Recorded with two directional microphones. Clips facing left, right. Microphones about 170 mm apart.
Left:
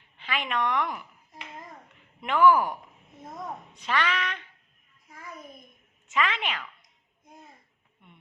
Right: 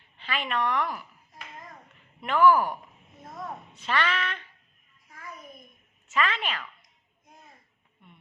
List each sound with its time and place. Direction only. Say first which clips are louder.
0.2 s a woman's voice: even; 10° left (ahead or behind)
2.2 s a woman's voice: even; 15° left (ahead or behind)
5.0 s a sound: even; 20° left (ahead or behind)
6.1 s a woman's voice: even; 15° left (ahead or behind)